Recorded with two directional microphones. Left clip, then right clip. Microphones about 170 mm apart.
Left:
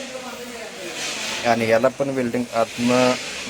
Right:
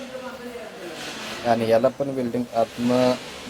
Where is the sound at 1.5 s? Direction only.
5° left (ahead or behind).